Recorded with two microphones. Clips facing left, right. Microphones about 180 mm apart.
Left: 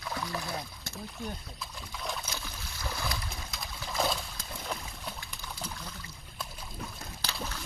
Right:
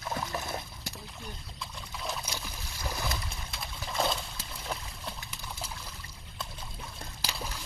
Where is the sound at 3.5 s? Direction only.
Centre (ahead or behind).